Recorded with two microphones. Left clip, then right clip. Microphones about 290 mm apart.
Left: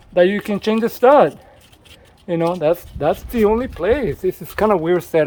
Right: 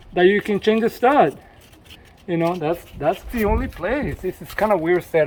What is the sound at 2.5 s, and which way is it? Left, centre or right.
A man's voice, centre.